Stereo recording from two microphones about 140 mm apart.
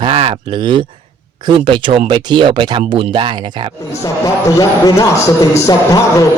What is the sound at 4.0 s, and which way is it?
Speech, 25° left (ahead or behind).